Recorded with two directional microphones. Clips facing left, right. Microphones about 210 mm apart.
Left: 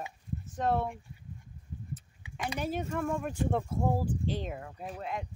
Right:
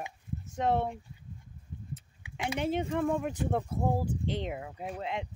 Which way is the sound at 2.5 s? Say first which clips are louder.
Right 4 dB; 25° right (ahead or behind).